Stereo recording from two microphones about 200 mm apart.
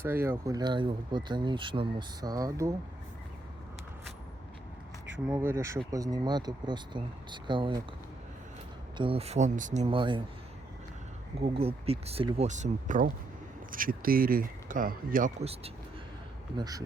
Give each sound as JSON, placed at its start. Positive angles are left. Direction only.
{"t": 0.0, "sound": "speech", "side_deg": -10}
{"t": 5.3, "sound": "speech", "side_deg": -10}
{"t": 9.0, "sound": "speech", "side_deg": -30}
{"t": 11.3, "sound": "speech", "side_deg": -30}
{"t": 16.6, "sound": "speech", "side_deg": -20}